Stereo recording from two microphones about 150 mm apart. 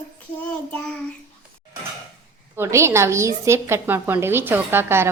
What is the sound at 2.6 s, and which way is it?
A woman's voice, 20° right (ahead or behind).